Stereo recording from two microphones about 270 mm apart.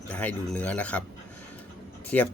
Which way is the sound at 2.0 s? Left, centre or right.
Centre.